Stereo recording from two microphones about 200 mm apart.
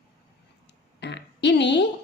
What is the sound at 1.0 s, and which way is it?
Speech, 60° left (ahead or behind).